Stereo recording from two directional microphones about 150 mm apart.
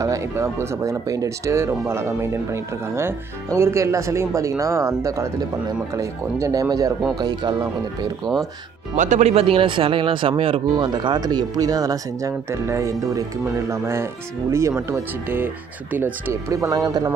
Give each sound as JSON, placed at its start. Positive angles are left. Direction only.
{"t": 0.0, "sound": "speech", "side_deg": -20}
{"t": 8.9, "sound": "speech", "side_deg": -55}